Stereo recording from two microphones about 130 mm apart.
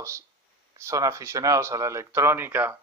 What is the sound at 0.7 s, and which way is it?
Speech, 25° right (ahead or behind).